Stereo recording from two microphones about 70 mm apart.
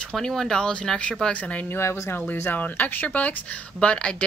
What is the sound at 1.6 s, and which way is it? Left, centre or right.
Speech, left.